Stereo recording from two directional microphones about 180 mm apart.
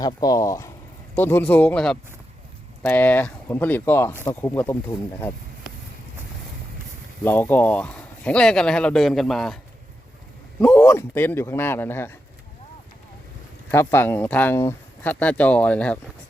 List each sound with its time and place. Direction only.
0.0 s speech: 20° left (ahead or behind)
7.3 s speech: 10° left (ahead or behind)
10.6 s speech: 5° left (ahead or behind)
13.7 s speech: 10° left (ahead or behind)